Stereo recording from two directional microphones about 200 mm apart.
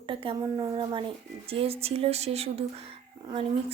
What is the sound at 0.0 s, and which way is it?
Speech, 25° right (ahead or behind).